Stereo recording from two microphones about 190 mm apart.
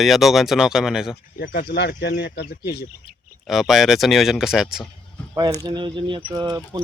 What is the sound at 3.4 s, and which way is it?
Speech, centre (ahead or behind).